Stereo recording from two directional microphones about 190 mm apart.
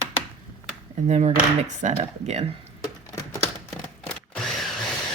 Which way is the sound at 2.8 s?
15° left (ahead or behind).